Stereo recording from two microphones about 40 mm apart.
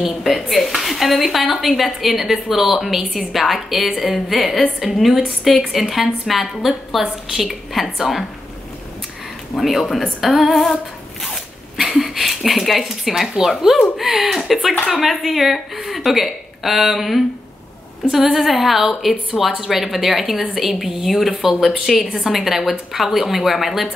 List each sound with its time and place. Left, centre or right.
0.0 s a woman's voice: centre
9.6 s a woman's voice: centre
12.0 s a sound: centre
12.4 s a woman's voice: centre